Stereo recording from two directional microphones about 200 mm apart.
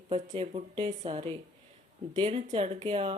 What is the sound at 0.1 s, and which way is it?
Speech, 30° right (ahead or behind).